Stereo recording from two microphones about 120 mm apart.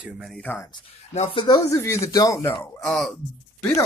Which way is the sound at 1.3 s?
45° left (ahead or behind).